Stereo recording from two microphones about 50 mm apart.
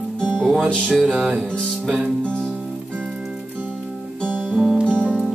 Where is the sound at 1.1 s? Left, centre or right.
Centre.